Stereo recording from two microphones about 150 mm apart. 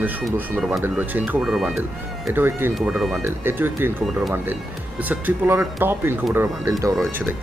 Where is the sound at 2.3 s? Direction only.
15° right (ahead or behind).